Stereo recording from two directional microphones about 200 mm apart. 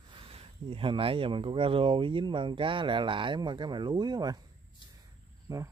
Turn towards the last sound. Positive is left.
turn(degrees=-15)  # may be behind; listen again after turning